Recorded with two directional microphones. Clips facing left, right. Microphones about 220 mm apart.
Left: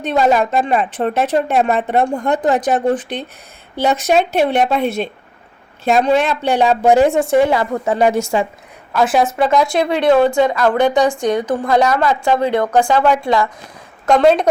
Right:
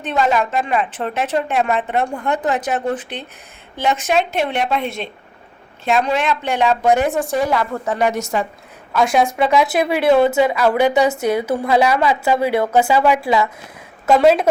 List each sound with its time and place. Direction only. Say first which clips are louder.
0.0 s a woman's voice: left 4 dB; 40° left (ahead or behind)
8.9 s a woman's voice: left 1 dB; centre (ahead or behind)